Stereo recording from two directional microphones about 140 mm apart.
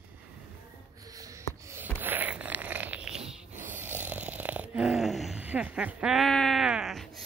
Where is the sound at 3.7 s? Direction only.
15° right (ahead or behind).